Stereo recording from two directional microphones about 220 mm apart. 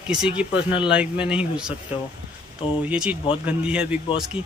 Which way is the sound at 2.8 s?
5° right (ahead or behind).